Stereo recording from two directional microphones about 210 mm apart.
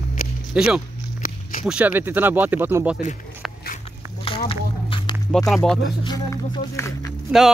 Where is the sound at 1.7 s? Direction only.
5° right (ahead or behind).